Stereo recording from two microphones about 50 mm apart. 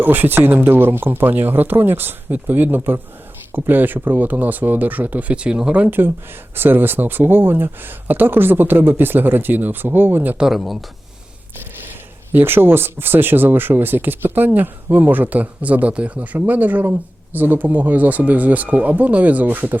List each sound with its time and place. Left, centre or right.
0.0 s speech: right
6.6 s speech: right
10.4 s speech: centre
12.3 s speech: right